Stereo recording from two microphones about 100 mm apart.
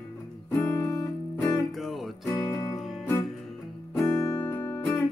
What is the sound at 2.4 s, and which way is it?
Music, 35° left (ahead or behind).